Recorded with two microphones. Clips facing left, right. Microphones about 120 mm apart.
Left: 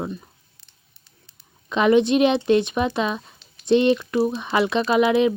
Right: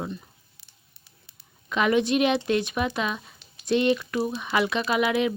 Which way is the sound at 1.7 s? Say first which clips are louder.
Left 5 dB; 25° left (ahead or behind).